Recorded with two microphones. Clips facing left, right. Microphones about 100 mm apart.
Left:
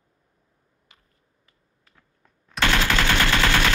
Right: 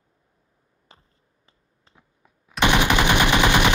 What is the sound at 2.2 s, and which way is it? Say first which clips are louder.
Machine gun: even; 5° right (ahead or behind).